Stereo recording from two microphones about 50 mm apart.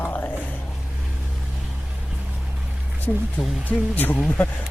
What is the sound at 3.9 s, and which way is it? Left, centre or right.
Speech, left.